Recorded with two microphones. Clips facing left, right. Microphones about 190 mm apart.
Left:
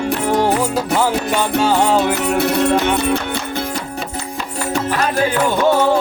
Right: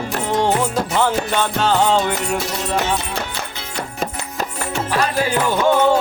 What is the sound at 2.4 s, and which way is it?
Music, 60° left (ahead or behind).